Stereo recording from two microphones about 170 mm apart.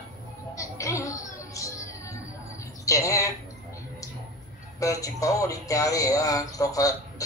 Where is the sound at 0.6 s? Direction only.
20° left (ahead or behind).